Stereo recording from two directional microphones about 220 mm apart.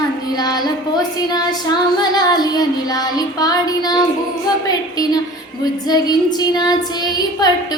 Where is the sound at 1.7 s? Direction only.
20° left (ahead or behind).